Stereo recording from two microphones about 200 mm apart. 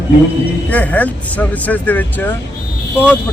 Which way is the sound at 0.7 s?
5° left (ahead or behind).